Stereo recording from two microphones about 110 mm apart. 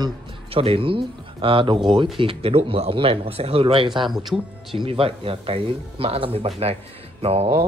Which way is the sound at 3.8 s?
45° right (ahead or behind).